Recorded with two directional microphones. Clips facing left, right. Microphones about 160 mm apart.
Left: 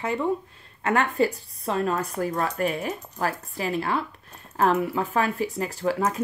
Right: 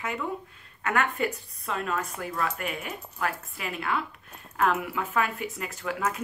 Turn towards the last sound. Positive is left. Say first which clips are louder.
# left 6 dB
turn(degrees=35)  # may be behind; listen again after turning